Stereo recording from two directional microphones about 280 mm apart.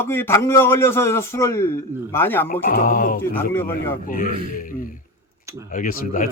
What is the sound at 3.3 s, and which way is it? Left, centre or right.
Speech, centre.